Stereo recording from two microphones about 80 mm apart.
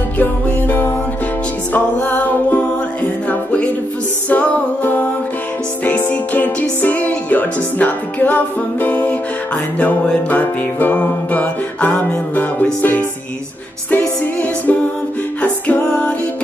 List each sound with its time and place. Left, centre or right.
0.2 s music: left